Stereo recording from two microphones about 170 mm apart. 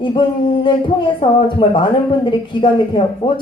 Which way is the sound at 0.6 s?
30° left (ahead or behind).